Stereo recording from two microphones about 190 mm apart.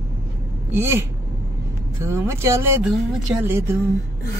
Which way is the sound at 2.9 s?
Centre (ahead or behind).